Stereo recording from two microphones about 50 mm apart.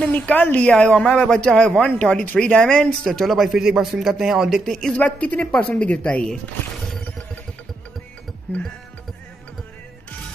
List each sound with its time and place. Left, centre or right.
0.1 s speech: left; by 1.6 s centre
1.8 s speech: left
2.8 s speech: centre
3.3 s a man's voice: centre
4.6 s speech: centre
4.9 s speech: left
6.2 s speech: centre